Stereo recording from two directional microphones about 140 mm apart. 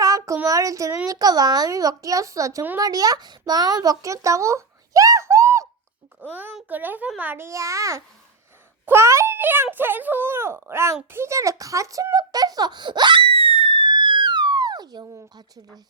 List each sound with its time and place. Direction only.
0.0 s child singing: 25° right (ahead or behind)
0.4 s a child's voice: 25° right (ahead or behind)